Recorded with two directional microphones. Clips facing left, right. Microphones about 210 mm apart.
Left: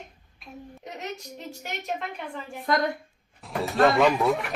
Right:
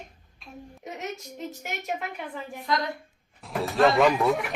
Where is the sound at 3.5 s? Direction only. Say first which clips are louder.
Even; centre (ahead or behind).